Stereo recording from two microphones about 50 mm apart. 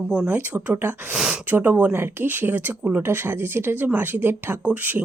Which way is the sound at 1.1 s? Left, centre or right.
Centre.